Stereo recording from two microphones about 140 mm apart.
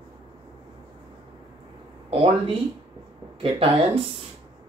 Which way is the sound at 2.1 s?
40° right (ahead or behind).